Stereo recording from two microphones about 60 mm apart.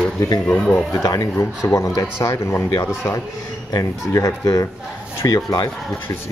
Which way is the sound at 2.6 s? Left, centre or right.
Left.